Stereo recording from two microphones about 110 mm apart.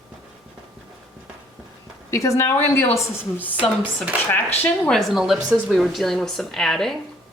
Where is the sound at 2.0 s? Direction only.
30° left (ahead or behind).